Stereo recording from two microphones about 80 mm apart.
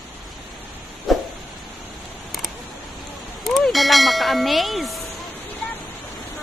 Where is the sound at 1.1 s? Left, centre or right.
Centre.